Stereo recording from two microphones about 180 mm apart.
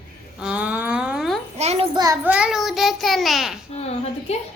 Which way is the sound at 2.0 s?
20° right (ahead or behind).